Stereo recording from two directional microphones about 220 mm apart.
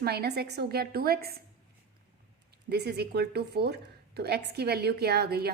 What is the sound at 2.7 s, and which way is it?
A woman's voice, 45° right (ahead or behind).